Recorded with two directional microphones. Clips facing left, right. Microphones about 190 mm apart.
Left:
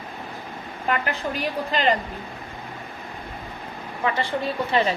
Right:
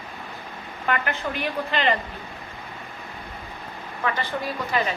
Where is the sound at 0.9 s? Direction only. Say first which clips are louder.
Left 1 dB; 35° left (ahead or behind).